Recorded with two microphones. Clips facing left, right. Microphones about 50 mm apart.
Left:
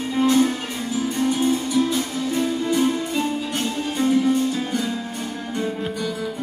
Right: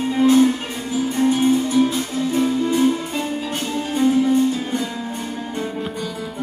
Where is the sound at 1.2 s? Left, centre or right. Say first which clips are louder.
Right 5 dB; right.